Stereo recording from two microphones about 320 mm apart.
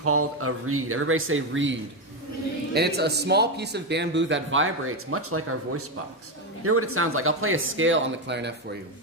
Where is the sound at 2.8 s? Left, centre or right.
Right.